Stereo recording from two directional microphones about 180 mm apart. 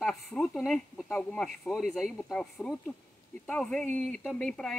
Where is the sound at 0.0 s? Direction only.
Centre (ahead or behind).